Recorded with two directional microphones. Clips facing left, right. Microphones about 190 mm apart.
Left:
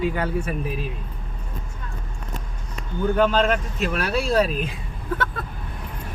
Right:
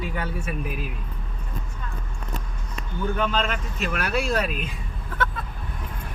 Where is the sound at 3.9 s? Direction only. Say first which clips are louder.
Left 2 dB; 30° left (ahead or behind).